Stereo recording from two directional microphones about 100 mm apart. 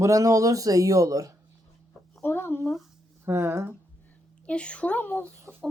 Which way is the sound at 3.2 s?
25° right (ahead or behind).